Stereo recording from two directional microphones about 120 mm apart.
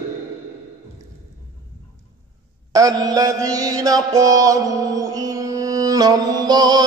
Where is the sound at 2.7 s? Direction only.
30° right (ahead or behind).